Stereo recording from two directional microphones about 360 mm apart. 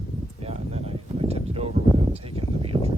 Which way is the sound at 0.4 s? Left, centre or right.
Centre.